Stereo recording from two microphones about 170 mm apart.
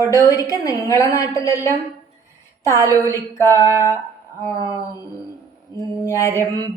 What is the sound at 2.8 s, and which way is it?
Speech, 20° right (ahead or behind).